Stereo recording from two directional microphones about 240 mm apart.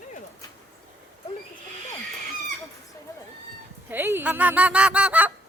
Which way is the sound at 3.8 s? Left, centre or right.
Centre.